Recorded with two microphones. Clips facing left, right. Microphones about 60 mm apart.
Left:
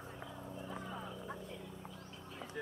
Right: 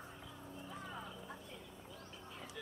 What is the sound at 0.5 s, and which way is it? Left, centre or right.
Vehicle, centre.